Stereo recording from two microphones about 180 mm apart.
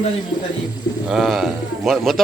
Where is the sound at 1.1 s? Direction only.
Centre (ahead or behind).